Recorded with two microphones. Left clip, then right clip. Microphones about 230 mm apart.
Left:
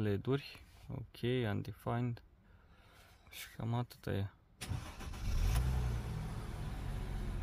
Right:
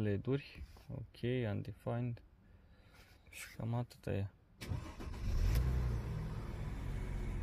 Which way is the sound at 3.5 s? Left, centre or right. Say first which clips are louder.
Left 2 dB; centre.